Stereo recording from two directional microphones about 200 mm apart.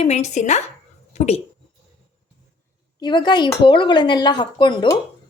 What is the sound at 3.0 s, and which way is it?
A woman's voice, 20° left (ahead or behind).